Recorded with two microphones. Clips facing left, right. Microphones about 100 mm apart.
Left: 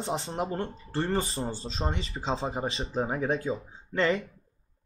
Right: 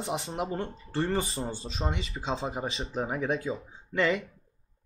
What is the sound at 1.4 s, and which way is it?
Speech, 10° left (ahead or behind).